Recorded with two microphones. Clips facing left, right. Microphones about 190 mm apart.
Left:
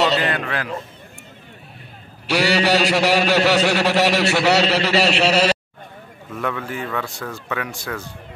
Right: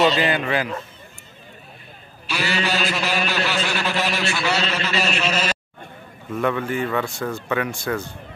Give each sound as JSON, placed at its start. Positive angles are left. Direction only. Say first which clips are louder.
{"t": 0.2, "sound": "speech", "louder": "right 2 dB", "side_deg": 0}
{"t": 2.2, "sound": "a man's voice", "louder": "left 7 dB", "side_deg": 75}
{"t": 6.3, "sound": "speech", "louder": "right 4 dB", "side_deg": 0}